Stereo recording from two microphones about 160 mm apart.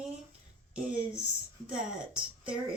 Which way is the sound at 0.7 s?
5° right (ahead or behind).